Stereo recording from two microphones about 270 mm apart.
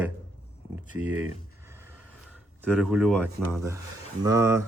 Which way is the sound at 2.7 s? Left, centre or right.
Centre.